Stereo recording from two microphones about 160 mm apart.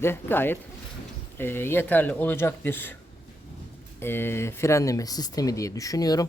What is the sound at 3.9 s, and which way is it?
A woman's voice, 15° left (ahead or behind).